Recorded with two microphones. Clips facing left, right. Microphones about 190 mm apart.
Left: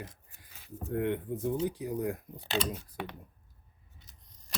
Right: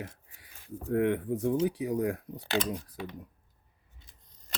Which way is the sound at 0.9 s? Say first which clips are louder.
Right 4 dB; 80° right.